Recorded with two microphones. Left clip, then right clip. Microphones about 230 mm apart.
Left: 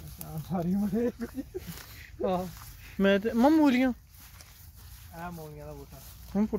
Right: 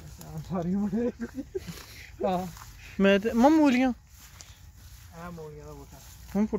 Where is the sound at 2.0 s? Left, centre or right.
Right.